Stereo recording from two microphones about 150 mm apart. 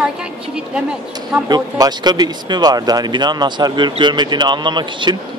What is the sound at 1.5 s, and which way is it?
Speech, 30° right (ahead or behind).